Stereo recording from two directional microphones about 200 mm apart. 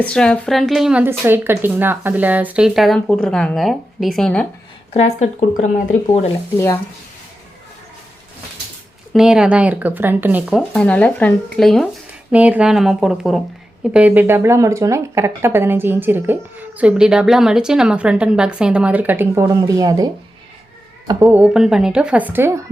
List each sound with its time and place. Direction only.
0.0 s a woman's voice: 5° left (ahead or behind)
4.9 s speech: 35° left (ahead or behind)
9.1 s a woman's voice: 5° right (ahead or behind)
21.1 s a woman's voice: 10° right (ahead or behind)